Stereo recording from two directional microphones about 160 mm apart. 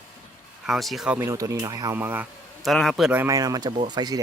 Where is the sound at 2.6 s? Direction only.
Centre (ahead or behind).